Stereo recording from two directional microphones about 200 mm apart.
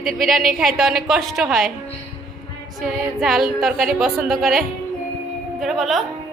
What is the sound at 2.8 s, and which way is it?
Speech, centre (ahead or behind).